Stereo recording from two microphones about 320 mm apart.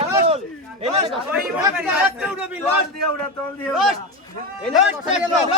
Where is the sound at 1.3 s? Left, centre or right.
Centre.